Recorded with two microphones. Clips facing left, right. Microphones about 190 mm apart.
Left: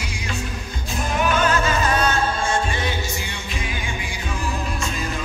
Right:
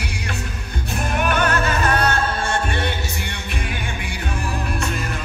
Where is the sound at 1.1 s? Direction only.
60° right (ahead or behind).